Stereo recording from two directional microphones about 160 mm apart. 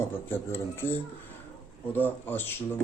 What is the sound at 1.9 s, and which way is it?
Speech, 10° left (ahead or behind).